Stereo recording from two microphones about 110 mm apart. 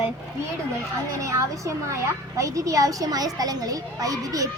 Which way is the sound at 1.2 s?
30° right (ahead or behind).